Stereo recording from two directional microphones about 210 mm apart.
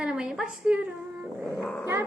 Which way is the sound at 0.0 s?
5° right (ahead or behind).